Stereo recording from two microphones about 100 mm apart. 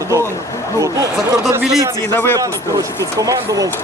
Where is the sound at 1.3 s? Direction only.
35° right (ahead or behind).